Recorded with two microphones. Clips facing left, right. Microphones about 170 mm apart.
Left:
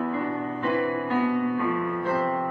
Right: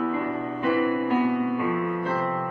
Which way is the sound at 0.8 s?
15° right (ahead or behind).